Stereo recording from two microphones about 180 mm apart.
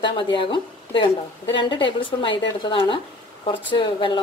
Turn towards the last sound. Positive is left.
turn(degrees=25)  # may be behind; listen again after turning